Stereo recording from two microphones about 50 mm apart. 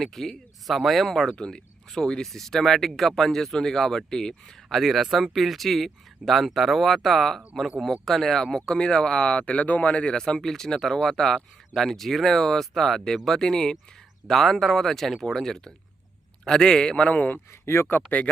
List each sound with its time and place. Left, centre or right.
0.0 s speech: centre
4.7 s speech: centre; by 10.2 s left
10.2 s speech: centre; by 17.4 s left
17.5 s speech: left
17.8 s speech: left